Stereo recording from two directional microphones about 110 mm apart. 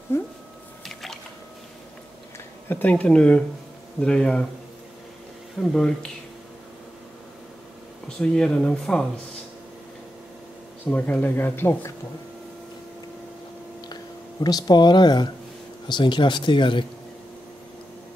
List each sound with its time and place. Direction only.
0.1 s speech: 25° left (ahead or behind)
0.8 s squish: centre (ahead or behind)
2.7 s speech: 15° left (ahead or behind)
5.6 s speech: 5° left (ahead or behind)
8.2 s speech: 5° left (ahead or behind)
10.9 s speech: 15° left (ahead or behind)
14.4 s speech: 40° left (ahead or behind)